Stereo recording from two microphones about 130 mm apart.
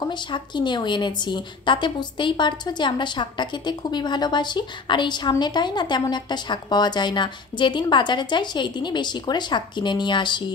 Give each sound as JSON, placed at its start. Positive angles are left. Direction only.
{"t": 0.1, "sound": "a woman's voice", "side_deg": 35}